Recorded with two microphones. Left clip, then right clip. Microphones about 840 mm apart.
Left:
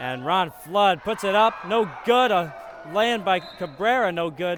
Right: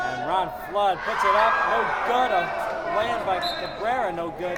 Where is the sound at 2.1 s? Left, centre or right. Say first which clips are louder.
Left 5 dB; left.